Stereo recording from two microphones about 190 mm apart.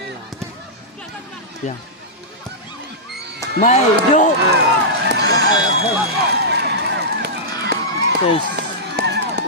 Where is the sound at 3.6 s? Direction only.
40° left (ahead or behind).